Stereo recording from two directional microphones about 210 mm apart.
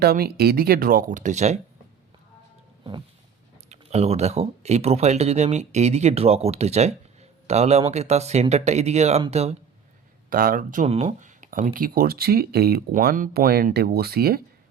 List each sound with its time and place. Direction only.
0.0 s speech: 45° right (ahead or behind)
3.7 s speech: 30° right (ahead or behind)
10.2 s speech: 40° right (ahead or behind)